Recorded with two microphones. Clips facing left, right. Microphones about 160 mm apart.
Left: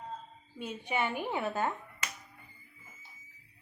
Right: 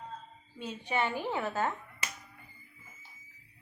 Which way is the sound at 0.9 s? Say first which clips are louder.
Right 1 dB; 10° left (ahead or behind).